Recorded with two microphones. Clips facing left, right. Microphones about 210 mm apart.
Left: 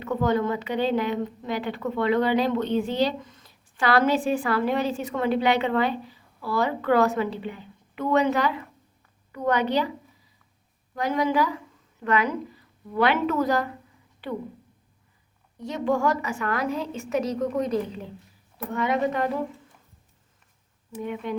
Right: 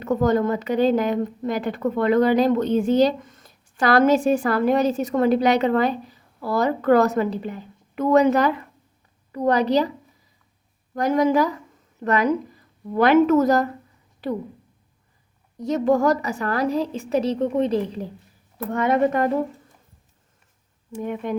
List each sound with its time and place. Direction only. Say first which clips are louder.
0.0 s a woman's voice: right 4 dB; 45° right (ahead or behind)
10.9 s a woman's voice: right 5 dB; 45° right (ahead or behind)
15.5 s a woman's voice: right 6 dB; 40° right (ahead or behind)
18.5 s a woman's voice: right 5 dB; 50° right (ahead or behind)
21.0 s a woman's voice: right 3 dB; 45° right (ahead or behind)